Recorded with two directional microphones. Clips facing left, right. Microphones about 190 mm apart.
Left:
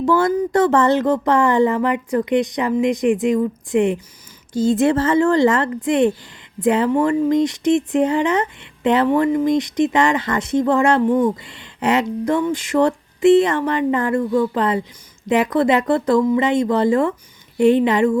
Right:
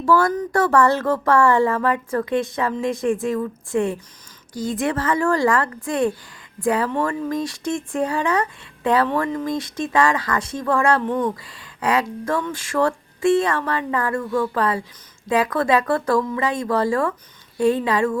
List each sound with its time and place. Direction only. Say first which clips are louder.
0.0 s speech: left 2 dB; 20° left (ahead or behind)